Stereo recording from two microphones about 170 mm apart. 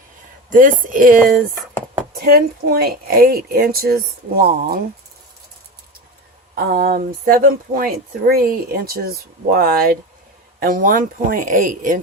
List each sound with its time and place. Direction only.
0.5 s speech: 55° right (ahead or behind)
2.2 s speech: 65° right (ahead or behind)
6.7 s speech: 60° right (ahead or behind)